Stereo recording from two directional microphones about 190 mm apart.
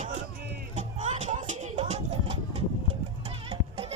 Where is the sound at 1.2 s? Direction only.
40° right (ahead or behind).